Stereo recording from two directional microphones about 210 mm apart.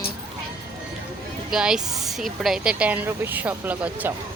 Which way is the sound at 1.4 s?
5° right (ahead or behind).